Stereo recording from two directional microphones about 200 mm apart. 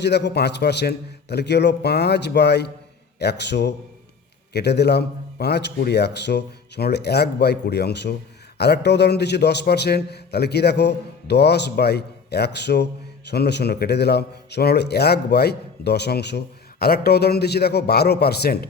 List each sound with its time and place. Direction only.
0.0 s a man's voice: 60° left (ahead or behind)